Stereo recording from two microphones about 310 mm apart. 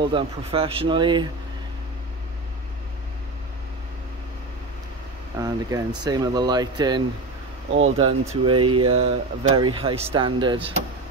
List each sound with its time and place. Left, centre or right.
0.0 s speech: centre
5.4 s speech: centre